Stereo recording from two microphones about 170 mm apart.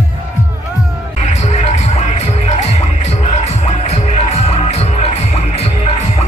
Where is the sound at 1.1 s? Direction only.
40° left (ahead or behind).